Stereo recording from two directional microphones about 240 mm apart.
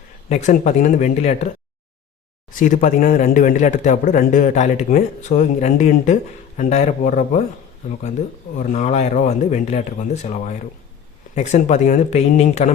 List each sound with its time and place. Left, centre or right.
0.3 s speech: left
2.5 s a man's voice: left
8.5 s a man's voice: left